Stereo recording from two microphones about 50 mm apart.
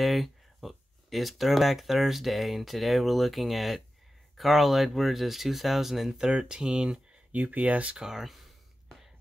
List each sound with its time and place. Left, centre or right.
0.0 s speech: centre
6.1 s speech: centre
7.3 s speech: right
8.0 s speech: centre